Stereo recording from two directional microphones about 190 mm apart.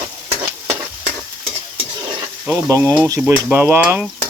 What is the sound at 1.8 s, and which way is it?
Stir, 20° right (ahead or behind).